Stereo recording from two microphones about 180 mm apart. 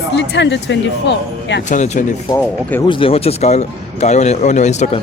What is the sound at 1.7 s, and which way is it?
Speech, 45° left (ahead or behind).